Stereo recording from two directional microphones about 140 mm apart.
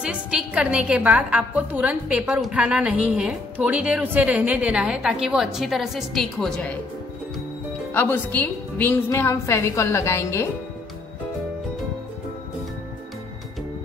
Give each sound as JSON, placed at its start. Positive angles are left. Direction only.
{"t": 0.0, "sound": "a woman's voice", "side_deg": -5}
{"t": 7.9, "sound": "a woman's voice", "side_deg": 15}